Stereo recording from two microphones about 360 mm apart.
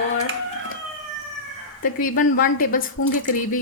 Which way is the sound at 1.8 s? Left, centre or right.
Left.